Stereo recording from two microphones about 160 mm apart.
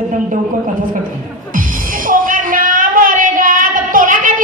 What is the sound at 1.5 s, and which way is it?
Music, 55° right (ahead or behind).